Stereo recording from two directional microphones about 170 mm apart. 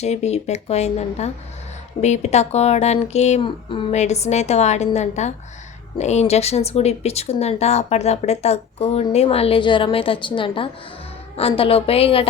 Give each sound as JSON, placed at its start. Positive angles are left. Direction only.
{"t": 0.0, "sound": "speech", "side_deg": 40}